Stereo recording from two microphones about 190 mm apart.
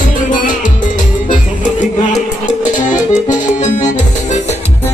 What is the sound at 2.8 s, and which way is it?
Accordion, 40° left (ahead or behind).